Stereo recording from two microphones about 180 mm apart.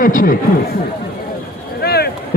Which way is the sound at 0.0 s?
50° left (ahead or behind).